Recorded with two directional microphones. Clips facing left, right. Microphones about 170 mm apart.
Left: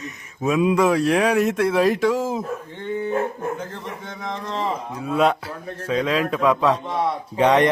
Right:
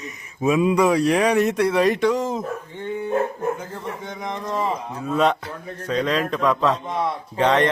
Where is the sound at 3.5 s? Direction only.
15° right (ahead or behind).